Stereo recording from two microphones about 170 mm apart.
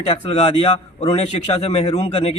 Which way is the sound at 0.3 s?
35° left (ahead or behind).